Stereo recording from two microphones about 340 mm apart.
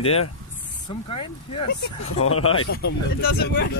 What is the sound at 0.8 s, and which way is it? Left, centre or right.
Speech, centre.